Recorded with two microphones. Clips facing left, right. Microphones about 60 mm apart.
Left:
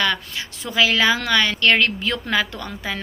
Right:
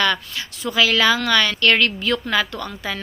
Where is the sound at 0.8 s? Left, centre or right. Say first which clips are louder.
Right 1 dB; left.